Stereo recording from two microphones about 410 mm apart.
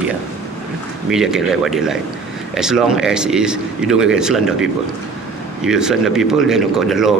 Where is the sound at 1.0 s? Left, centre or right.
Centre.